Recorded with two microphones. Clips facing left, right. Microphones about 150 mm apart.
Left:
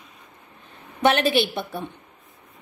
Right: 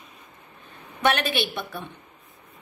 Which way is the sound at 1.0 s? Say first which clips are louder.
Left 4 dB; 25° left (ahead or behind).